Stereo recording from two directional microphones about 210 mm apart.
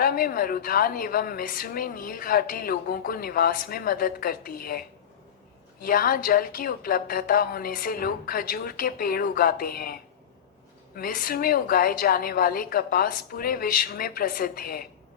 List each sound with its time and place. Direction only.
0.0 s a woman's voice: 45° left (ahead or behind)
5.8 s a woman's voice: 45° left (ahead or behind)